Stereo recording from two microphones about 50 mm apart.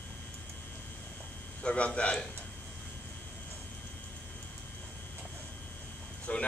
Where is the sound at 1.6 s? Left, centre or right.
Left.